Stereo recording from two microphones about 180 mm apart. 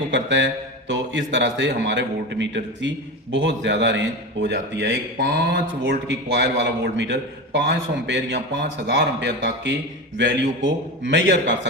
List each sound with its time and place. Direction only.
0.1 s a man's voice: 90° right